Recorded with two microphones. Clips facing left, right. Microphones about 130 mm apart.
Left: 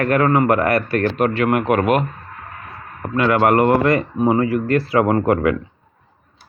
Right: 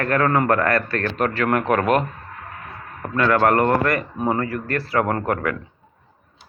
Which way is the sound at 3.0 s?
15° left (ahead or behind).